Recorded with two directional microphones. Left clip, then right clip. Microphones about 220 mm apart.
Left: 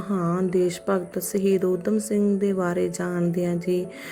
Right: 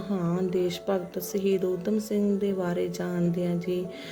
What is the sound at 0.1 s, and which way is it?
Speech, 20° left (ahead or behind).